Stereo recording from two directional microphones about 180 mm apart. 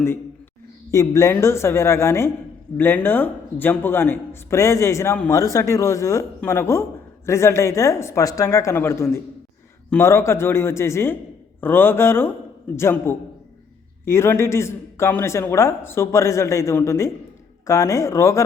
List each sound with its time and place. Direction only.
0.9 s speech: 15° left (ahead or behind)